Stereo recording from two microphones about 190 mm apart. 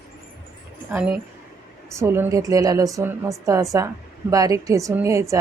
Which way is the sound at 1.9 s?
15° right (ahead or behind).